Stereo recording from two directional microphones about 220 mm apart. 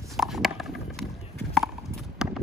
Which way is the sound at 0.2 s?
Centre (ahead or behind).